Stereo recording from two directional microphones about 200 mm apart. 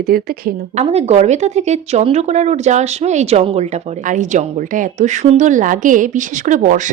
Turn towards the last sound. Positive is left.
turn(degrees=-40)  # may be behind; listen again after turning